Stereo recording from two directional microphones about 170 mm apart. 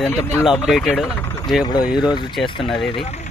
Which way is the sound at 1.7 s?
25° left (ahead or behind).